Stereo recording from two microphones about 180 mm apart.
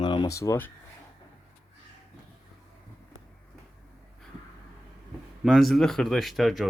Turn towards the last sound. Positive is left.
turn(degrees=0)  # may be behind; listen again after turning